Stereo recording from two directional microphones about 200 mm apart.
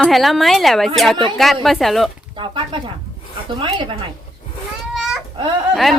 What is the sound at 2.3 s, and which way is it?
Speech, 25° right (ahead or behind).